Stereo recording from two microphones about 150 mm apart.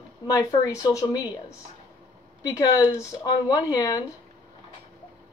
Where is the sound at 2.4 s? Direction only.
25° left (ahead or behind).